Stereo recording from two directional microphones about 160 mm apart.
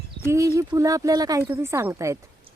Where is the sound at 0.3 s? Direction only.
20° right (ahead or behind).